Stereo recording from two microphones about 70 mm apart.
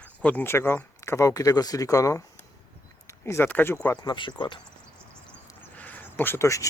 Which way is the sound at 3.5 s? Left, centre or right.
Left.